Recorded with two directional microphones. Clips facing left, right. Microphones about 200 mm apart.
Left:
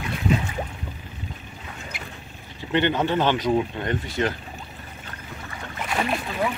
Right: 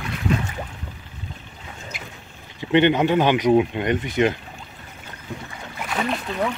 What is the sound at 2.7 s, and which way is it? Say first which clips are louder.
Speech: right 5 dB; 15° right (ahead or behind).